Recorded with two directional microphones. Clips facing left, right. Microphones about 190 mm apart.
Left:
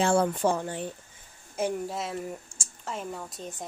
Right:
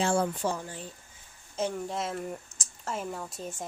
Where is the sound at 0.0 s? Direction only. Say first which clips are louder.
Left 4 dB; 60° left (ahead or behind).